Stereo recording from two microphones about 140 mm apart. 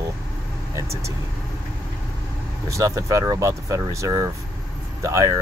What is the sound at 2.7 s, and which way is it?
Speech, 20° right (ahead or behind).